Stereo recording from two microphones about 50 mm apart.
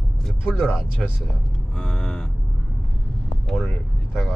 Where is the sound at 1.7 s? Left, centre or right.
Centre.